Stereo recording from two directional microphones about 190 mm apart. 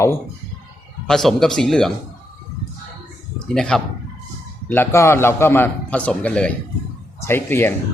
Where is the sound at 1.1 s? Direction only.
Centre (ahead or behind).